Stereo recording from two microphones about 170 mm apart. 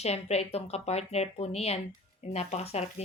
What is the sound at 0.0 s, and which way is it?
Speech, 40° left (ahead or behind).